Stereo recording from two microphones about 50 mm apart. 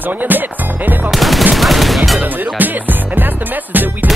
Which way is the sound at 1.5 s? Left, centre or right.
Centre.